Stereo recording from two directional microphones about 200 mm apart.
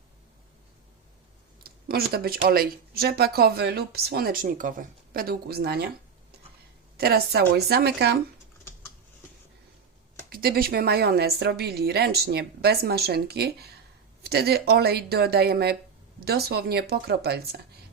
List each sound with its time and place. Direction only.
1.6 s speech: 50° right (ahead or behind)
6.9 s speech: 50° right (ahead or behind)
10.2 s speech: 50° right (ahead or behind)